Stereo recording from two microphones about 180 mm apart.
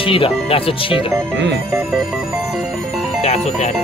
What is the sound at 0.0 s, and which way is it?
Speech, 30° left (ahead or behind).